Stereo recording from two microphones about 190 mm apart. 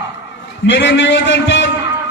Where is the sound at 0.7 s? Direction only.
70° left (ahead or behind).